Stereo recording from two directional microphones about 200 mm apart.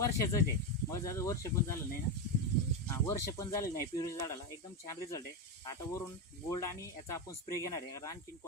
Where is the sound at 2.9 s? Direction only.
15° left (ahead or behind).